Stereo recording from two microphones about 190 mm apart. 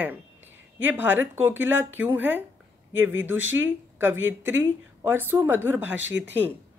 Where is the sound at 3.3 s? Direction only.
90° right.